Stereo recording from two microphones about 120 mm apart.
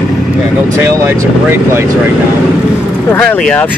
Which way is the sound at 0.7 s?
20° right (ahead or behind).